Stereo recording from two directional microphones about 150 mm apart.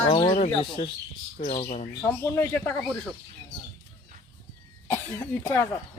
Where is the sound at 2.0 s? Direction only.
15° left (ahead or behind).